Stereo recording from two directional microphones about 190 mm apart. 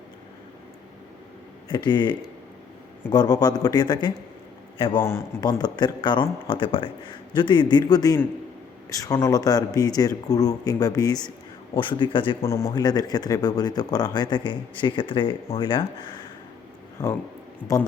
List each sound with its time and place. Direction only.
1.7 s speech: 25° left (ahead or behind)
5.0 s speech: 15° left (ahead or behind)
12.5 s speech: 15° left (ahead or behind)